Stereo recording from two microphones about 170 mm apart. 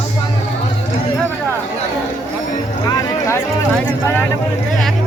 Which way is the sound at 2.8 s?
20° left (ahead or behind).